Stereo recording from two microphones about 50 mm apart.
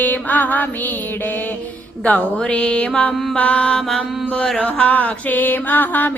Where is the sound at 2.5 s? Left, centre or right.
Left.